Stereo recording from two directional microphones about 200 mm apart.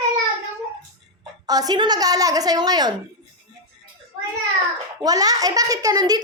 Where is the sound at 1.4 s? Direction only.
20° right (ahead or behind).